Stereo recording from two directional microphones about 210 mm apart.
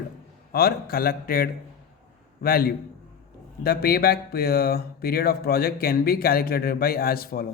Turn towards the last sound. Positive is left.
turn(degrees=45)  # may be behind; listen again after turning